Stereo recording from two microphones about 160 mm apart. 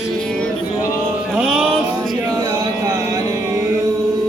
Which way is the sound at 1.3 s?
5° right (ahead or behind).